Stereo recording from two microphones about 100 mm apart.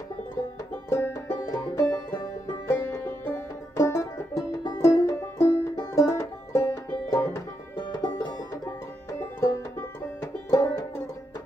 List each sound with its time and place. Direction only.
0.8 s music: 30° left (ahead or behind)
2.9 s music: 20° left (ahead or behind)
3.7 s banjo: 30° left (ahead or behind)
4.7 s music: 25° left (ahead or behind)
7.7 s music: 50° left (ahead or behind)
9.4 s music: 30° left (ahead or behind)